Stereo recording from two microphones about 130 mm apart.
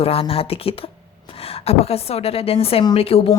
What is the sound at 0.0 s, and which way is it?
A woman's voice, 45° left (ahead or behind).